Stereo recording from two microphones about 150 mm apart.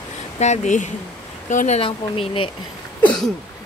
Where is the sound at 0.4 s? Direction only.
50° left (ahead or behind).